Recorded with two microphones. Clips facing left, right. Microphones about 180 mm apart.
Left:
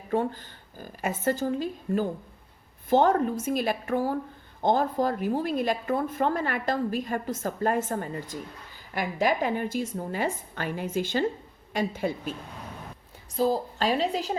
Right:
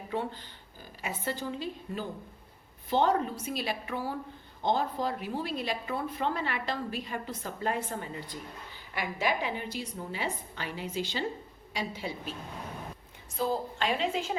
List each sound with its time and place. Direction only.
0.1 s a woman's voice: 45° left (ahead or behind)
13.3 s a woman's voice: 35° left (ahead or behind)